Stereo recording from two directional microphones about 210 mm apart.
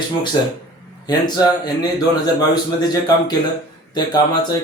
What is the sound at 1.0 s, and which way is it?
A man's voice, 20° left (ahead or behind).